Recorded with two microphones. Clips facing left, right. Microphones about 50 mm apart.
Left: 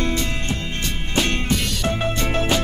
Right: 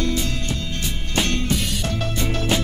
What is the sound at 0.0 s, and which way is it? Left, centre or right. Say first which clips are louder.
Music: left 1 dB; left.